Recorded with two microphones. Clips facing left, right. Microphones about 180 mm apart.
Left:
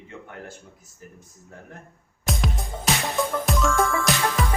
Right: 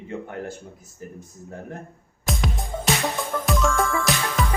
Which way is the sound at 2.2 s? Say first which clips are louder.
Right 1 dB; centre (ahead or behind).